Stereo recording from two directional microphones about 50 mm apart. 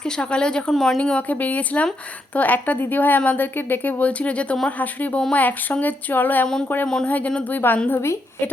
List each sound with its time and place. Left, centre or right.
0.0 s speech: centre
0.7 s speech: centre
0.9 s speech: left
1.3 s speech: left
4.0 s speech: left
7.9 s a woman's voice: left